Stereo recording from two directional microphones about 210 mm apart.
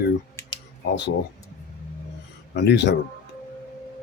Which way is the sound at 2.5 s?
55° left (ahead or behind).